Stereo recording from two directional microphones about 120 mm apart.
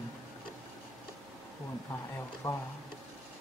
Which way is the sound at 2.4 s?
25° left (ahead or behind).